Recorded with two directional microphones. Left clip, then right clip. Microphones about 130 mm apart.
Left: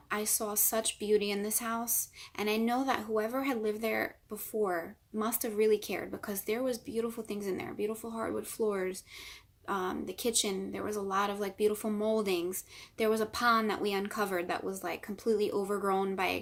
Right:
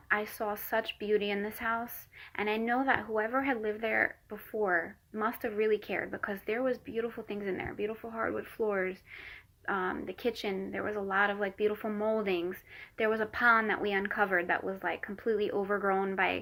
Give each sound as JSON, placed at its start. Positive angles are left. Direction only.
{"t": 0.1, "sound": "speech", "side_deg": 30}